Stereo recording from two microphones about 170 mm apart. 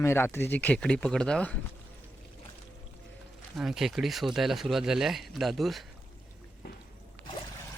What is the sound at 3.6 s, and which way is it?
Speech, centre (ahead or behind).